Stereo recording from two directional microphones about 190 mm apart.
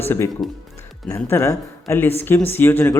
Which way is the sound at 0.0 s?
10° left (ahead or behind).